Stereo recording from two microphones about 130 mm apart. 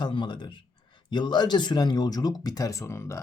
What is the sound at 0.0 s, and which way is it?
Speech, 35° left (ahead or behind).